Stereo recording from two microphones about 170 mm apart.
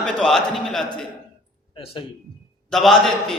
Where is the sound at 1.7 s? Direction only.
30° left (ahead or behind).